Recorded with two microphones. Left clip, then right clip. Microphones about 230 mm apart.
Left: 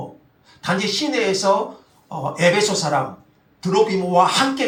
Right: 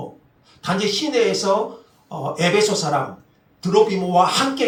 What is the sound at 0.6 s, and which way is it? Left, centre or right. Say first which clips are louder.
Speech: even; left.